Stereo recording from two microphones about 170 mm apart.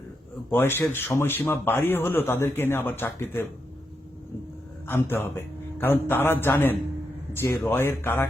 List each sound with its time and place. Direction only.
0.5 s a man's voice: 15° left (ahead or behind)
4.9 s a man's voice: 15° left (ahead or behind)